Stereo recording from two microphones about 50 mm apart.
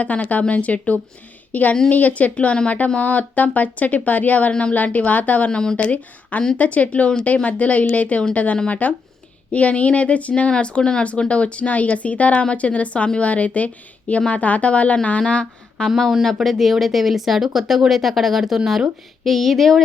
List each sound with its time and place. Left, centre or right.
0.0 s speech: left
5.5 s speech: centre
5.7 s speech: left
16.2 s speech: centre